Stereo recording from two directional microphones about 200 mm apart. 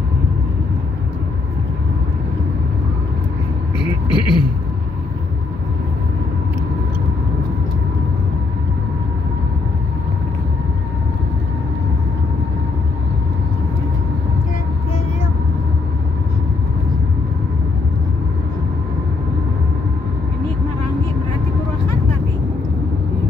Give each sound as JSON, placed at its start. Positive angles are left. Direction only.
{"t": 3.7, "sound": "vehicle", "side_deg": 25}